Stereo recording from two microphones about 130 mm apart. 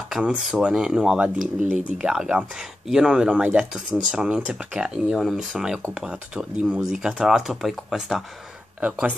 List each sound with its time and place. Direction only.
0.1 s speech: 5° right (ahead or behind)
1.4 s speech: 75° right (ahead or behind)
1.8 s speech: 10° right (ahead or behind)